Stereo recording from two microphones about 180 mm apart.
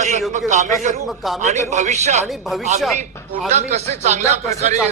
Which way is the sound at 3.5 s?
40° right (ahead or behind).